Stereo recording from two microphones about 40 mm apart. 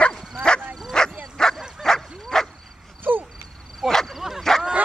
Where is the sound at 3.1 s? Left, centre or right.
Right.